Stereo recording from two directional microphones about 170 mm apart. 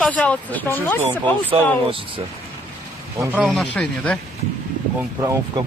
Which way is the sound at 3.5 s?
5° left (ahead or behind).